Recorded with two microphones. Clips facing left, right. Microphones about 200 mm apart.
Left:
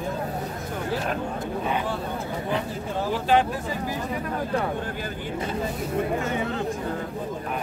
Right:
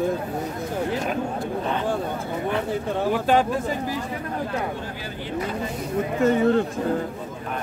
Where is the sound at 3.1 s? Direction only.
45° right (ahead or behind).